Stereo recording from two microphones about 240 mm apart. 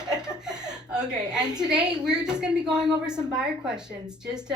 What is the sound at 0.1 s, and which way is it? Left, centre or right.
Speech, centre.